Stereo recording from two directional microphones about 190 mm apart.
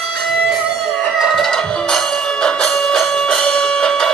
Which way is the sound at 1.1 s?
Centre (ahead or behind).